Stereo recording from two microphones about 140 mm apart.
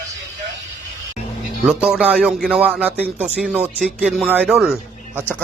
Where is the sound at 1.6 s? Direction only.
10° right (ahead or behind).